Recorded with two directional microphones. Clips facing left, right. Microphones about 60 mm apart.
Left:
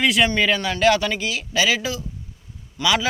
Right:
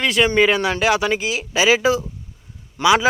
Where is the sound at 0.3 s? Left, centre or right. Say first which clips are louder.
Right 4 dB; centre.